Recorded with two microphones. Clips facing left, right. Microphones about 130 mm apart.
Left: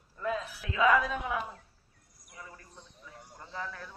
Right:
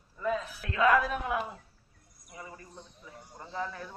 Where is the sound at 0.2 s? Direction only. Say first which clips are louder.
Right 2 dB; centre (ahead or behind).